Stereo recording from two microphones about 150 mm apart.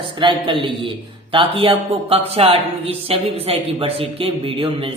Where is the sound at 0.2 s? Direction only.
35° right (ahead or behind).